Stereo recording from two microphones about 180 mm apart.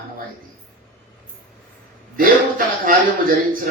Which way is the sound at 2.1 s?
50° right (ahead or behind).